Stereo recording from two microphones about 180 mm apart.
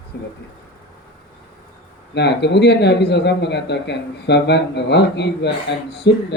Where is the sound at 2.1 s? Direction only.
70° left (ahead or behind).